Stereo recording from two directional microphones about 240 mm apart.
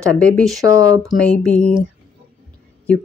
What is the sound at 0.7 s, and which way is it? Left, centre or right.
Speech, centre.